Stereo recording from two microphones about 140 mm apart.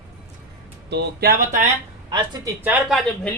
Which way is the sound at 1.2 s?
90° right.